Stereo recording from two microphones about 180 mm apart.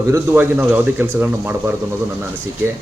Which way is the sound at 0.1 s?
10° right (ahead or behind).